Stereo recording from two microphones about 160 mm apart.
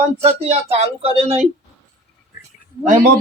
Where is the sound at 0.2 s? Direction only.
40° right (ahead or behind).